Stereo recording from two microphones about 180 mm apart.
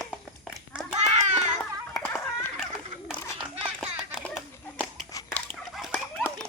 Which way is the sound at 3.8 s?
Centre (ahead or behind).